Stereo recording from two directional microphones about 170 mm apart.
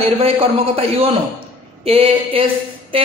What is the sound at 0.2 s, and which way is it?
Speech, 35° right (ahead or behind).